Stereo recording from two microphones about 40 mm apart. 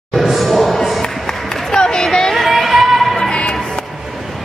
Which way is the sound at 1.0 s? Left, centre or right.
Centre.